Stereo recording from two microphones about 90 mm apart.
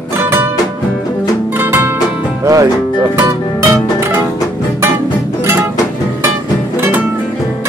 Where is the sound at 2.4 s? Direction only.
40° right (ahead or behind).